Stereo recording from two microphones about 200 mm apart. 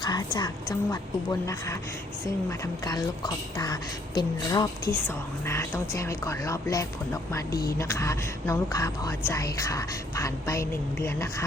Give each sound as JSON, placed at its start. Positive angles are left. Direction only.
{"t": 0.0, "sound": "a woman's voice", "side_deg": 20}